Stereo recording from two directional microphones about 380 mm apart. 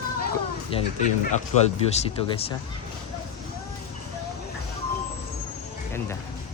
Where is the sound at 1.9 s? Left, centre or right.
Centre.